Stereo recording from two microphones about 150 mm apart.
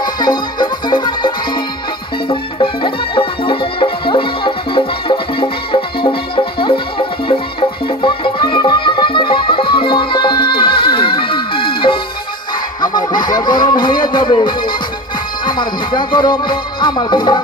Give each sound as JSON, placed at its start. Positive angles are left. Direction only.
{"t": 0.0, "sound": "music", "side_deg": 30}